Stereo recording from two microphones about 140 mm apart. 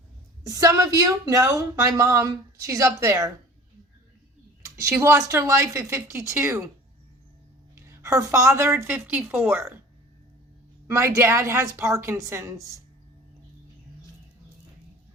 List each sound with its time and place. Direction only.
0.4 s a woman's voice: 25° right (ahead or behind)
4.6 s a woman's voice: 20° right (ahead or behind)
7.8 s a woman's voice: 20° right (ahead or behind)
10.8 s a woman's voice: 20° right (ahead or behind)